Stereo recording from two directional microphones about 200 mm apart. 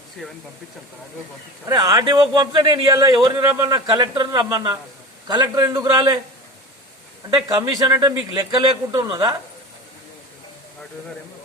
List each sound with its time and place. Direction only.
1.6 s a man's voice: 20° right (ahead or behind)
7.4 s a man's voice: 20° right (ahead or behind)